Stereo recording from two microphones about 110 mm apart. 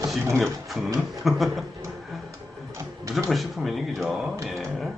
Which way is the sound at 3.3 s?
Centre (ahead or behind).